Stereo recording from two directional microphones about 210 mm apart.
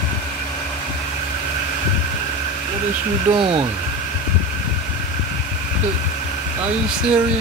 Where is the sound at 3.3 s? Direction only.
25° right (ahead or behind).